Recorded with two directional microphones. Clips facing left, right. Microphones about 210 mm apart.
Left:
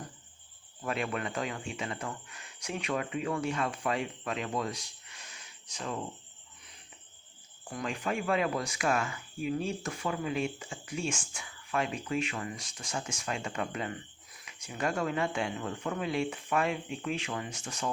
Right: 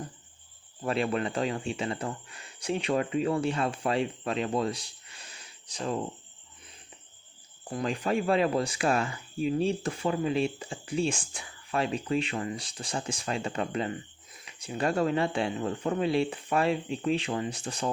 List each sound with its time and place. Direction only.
0.8 s speech: 30° right (ahead or behind)
7.6 s speech: 35° right (ahead or behind)